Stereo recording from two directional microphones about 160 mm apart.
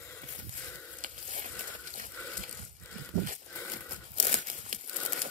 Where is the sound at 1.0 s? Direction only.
55° right (ahead or behind).